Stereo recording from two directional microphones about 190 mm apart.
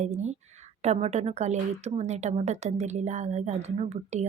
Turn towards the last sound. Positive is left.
turn(degrees=-35)  # may be behind; listen again after turning